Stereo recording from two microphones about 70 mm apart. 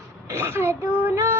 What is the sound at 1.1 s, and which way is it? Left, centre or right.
Female singing, right.